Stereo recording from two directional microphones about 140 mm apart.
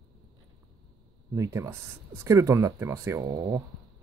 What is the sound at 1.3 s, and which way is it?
Speech, 20° right (ahead or behind).